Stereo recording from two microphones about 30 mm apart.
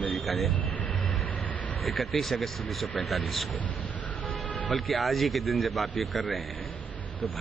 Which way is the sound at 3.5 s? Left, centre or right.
Left.